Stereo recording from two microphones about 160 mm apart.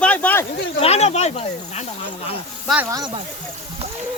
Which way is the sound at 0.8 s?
40° left (ahead or behind).